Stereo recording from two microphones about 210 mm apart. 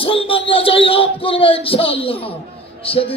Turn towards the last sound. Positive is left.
turn(degrees=25)  # may be behind; listen again after turning